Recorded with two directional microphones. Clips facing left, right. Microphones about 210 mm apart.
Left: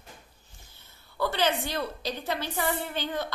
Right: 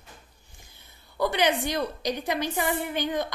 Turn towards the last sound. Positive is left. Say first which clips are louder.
# right 4 dB
turn(degrees=-15)  # may be behind; listen again after turning